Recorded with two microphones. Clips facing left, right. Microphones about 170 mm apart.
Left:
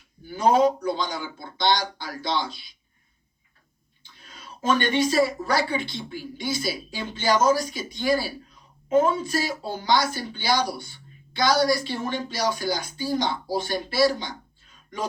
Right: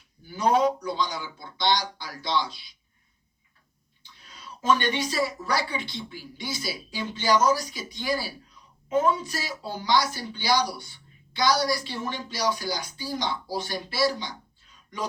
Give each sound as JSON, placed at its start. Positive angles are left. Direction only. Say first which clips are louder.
{"t": 0.8, "sound": "speech", "louder": "left 2 dB", "side_deg": 50}
{"t": 4.0, "sound": "speech", "louder": "left 1 dB", "side_deg": 50}
{"t": 8.9, "sound": "speech", "louder": "left 3 dB", "side_deg": 25}
{"t": 9.1, "sound": "speech", "louder": "left 7 dB", "side_deg": 50}